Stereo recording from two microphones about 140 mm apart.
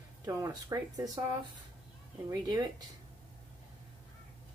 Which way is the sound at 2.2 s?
25° right (ahead or behind).